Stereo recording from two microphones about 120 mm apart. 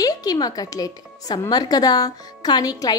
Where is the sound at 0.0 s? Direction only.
30° left (ahead or behind).